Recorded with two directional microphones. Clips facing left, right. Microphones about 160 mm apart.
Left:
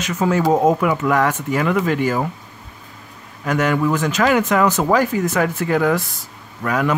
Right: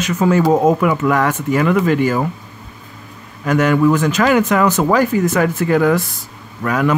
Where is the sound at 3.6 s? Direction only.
55° right (ahead or behind).